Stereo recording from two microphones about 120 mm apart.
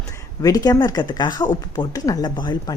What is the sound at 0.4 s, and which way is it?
Speech, 30° left (ahead or behind).